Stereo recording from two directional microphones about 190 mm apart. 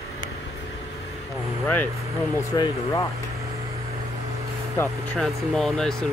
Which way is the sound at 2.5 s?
20° left (ahead or behind).